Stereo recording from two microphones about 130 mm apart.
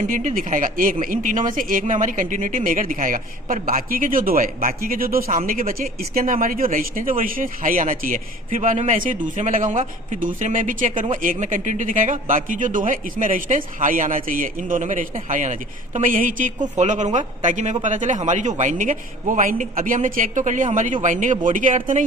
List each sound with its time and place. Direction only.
0.1 s speech: 80° right
16.7 s a man's voice: 65° right (ahead or behind)